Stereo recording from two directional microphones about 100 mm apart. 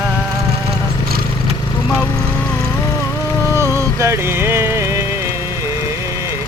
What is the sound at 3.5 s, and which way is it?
Music, 30° right (ahead or behind).